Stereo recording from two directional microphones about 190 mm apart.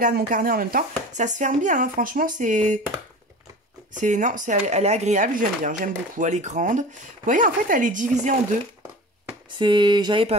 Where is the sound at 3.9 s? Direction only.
40° right (ahead or behind).